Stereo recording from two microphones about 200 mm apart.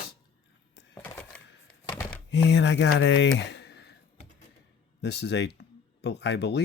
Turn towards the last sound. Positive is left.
turn(degrees=55)  # may be behind; listen again after turning